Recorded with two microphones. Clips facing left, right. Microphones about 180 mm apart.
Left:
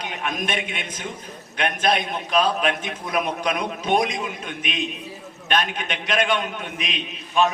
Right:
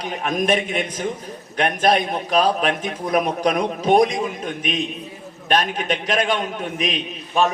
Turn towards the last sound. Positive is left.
turn(degrees=-40)  # may be behind; listen again after turning